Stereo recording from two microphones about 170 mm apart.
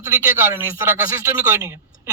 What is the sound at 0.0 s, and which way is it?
A man's voice, 15° right (ahead or behind).